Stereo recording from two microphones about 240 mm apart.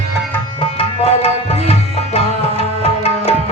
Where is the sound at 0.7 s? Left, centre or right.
Left.